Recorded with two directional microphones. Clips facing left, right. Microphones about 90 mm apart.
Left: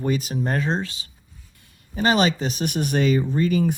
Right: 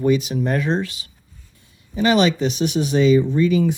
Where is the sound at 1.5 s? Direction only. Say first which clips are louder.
Right 1 dB; 65° left (ahead or behind).